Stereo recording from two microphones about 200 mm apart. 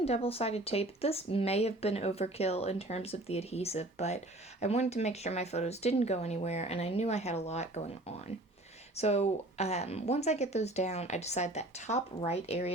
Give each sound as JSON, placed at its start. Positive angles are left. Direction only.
{"t": 0.0, "sound": "speech", "side_deg": 30}
{"t": 9.0, "sound": "speech", "side_deg": 30}